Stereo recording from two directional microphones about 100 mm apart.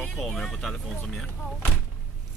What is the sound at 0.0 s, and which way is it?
Speech, 5° left (ahead or behind).